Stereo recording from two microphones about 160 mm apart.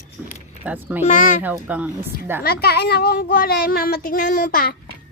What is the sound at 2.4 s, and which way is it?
A child's voice, 75° left (ahead or behind).